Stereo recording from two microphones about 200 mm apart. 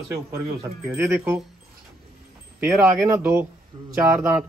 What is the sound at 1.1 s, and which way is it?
Speech, 15° right (ahead or behind).